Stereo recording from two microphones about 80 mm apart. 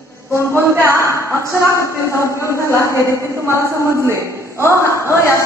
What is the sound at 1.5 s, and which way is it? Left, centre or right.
A woman's voice, left.